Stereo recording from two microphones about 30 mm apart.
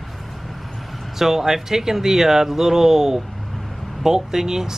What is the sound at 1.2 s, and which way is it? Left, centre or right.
Speech, centre.